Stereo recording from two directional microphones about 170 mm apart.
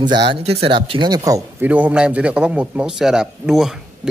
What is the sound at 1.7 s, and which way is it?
A man's voice, 10° right (ahead or behind).